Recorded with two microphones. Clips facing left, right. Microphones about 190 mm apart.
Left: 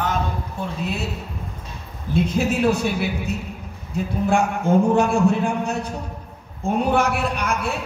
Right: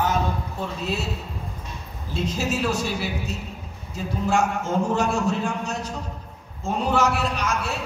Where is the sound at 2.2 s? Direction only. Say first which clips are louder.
Left 5 dB; 55° left (ahead or behind).